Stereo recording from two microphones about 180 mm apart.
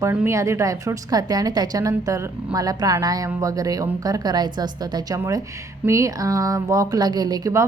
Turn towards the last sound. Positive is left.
turn(degrees=-20)  # may be behind; listen again after turning